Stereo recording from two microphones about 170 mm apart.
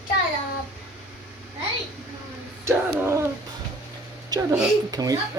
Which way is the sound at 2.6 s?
15° right (ahead or behind).